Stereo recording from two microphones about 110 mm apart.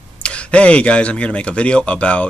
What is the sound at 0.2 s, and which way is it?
Speech, 10° left (ahead or behind).